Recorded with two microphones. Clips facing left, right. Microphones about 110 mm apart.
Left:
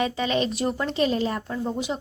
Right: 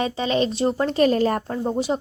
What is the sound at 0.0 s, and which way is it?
Speech, 30° right (ahead or behind).